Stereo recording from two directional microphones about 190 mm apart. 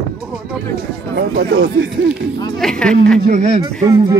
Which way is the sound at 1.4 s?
50° right (ahead or behind).